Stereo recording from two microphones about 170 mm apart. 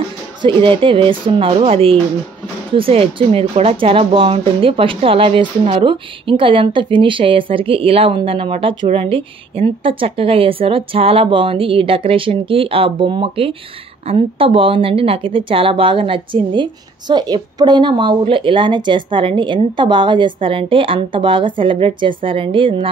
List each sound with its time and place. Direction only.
0.4 s speech: 30° right (ahead or behind)